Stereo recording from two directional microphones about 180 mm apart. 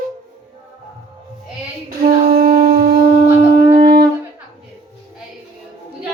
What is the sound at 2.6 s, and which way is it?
Wind instrument, 55° right (ahead or behind).